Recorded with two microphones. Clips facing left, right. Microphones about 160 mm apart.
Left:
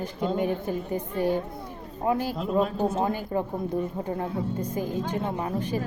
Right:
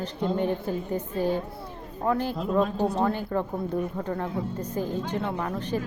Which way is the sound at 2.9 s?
20° left (ahead or behind).